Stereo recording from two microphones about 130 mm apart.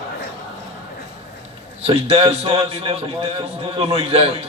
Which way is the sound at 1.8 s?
50° right (ahead or behind).